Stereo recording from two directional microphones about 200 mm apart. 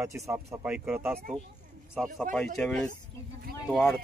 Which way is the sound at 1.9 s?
Centre (ahead or behind).